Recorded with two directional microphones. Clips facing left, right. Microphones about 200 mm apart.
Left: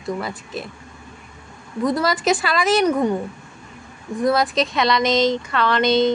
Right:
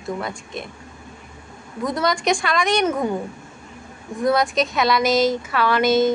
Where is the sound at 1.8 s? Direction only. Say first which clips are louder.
Left 2 dB; centre (ahead or behind).